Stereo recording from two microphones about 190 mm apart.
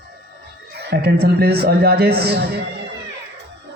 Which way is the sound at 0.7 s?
60° right (ahead or behind).